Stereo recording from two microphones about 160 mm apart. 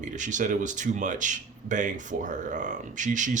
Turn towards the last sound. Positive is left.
turn(degrees=-50)  # may be behind; listen again after turning